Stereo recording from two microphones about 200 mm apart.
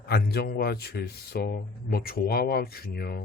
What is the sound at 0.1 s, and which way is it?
Speech, 55° left (ahead or behind).